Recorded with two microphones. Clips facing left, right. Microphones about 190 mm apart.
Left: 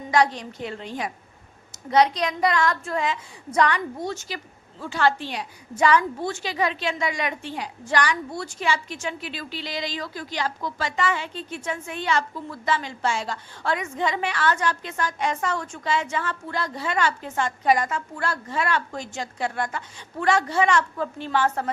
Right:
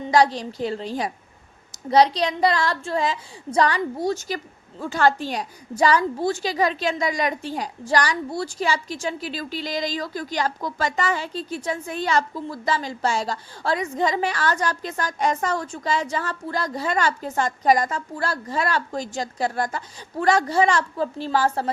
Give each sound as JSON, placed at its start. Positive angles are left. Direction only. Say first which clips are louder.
{"t": 0.0, "sound": "a woman's voice", "louder": "right 3 dB", "side_deg": -35}